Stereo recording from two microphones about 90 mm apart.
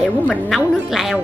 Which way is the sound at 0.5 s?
Centre (ahead or behind).